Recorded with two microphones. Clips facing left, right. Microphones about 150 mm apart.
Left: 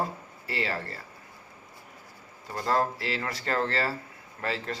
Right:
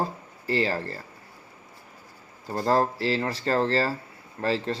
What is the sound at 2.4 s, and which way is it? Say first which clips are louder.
Speech: right 4 dB; 35° right (ahead or behind).